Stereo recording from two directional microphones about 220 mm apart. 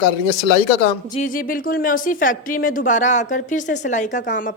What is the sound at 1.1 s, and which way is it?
A woman's voice, 35° left (ahead or behind).